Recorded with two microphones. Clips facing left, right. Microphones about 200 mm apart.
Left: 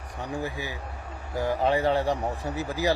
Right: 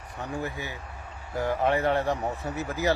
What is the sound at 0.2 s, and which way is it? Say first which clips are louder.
Speech: left 1 dB; 15° left (ahead or behind).